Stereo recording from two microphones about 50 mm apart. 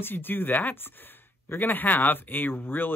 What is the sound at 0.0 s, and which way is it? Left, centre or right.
Speech, left.